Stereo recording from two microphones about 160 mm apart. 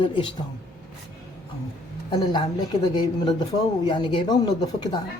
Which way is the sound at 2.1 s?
30° left (ahead or behind).